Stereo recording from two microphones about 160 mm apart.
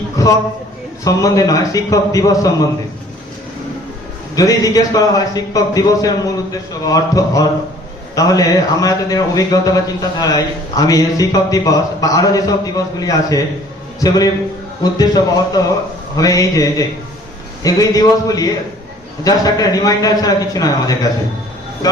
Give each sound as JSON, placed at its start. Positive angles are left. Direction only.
{"t": 0.2, "sound": "a man's voice", "side_deg": 20}
{"t": 4.4, "sound": "speech", "side_deg": 20}
{"t": 14.9, "sound": "speech", "side_deg": 25}